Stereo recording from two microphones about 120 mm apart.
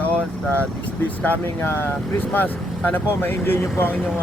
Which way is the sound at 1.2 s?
15° left (ahead or behind).